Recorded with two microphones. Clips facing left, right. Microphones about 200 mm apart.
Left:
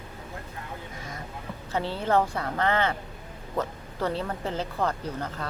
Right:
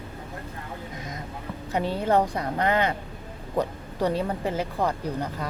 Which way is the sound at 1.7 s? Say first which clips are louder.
Right 2 dB; 15° right (ahead or behind).